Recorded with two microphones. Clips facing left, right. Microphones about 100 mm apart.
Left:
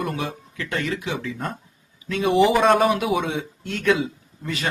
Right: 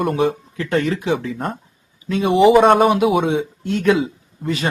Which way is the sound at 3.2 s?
30° right (ahead or behind).